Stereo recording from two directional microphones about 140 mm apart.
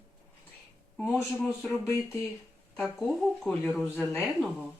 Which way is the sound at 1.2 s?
10° left (ahead or behind).